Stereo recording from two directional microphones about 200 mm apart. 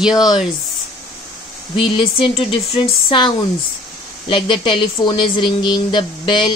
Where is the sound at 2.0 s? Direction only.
30° left (ahead or behind).